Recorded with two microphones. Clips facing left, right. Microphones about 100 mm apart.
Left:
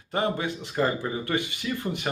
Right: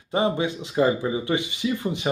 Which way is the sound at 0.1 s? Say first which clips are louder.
Right 4 dB; 15° right (ahead or behind).